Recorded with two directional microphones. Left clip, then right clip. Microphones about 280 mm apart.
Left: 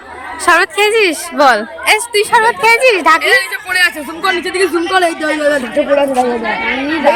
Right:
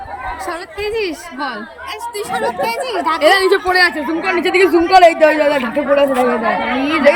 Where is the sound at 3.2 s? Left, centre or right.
Right.